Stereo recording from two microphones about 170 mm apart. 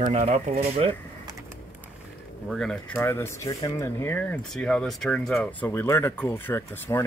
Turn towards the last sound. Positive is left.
turn(degrees=15)  # may be behind; listen again after turning